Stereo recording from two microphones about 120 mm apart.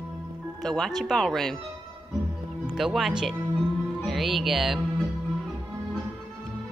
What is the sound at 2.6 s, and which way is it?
Speech, 5° right (ahead or behind).